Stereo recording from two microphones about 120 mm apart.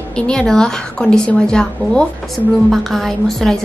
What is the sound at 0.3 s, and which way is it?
A woman's voice, 5° left (ahead or behind).